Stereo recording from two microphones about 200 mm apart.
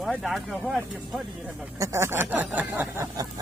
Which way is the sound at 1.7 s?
15° right (ahead or behind).